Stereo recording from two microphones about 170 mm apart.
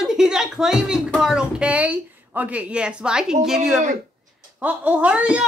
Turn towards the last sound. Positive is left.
turn(degrees=-5)  # may be behind; listen again after turning